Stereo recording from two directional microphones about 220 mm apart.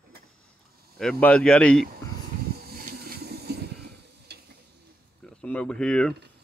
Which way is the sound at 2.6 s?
45° right (ahead or behind).